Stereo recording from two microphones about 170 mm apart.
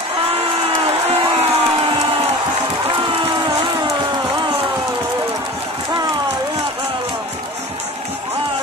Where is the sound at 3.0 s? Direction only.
30° right (ahead or behind).